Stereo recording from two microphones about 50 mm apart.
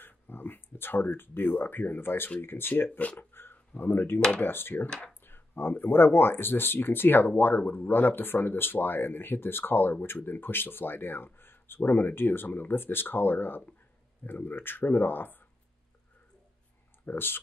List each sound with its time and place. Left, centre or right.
0.0 s speech: left
3.2 s a sound: left
4.4 s speech: left
4.8 s speech: centre
5.2 s speech: left
17.0 s speech: left